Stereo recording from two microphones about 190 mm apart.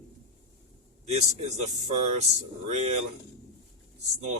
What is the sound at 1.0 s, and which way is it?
Speech, 35° right (ahead or behind).